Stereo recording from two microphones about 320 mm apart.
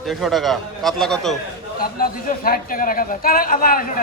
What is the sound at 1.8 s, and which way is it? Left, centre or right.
A man's voice, left.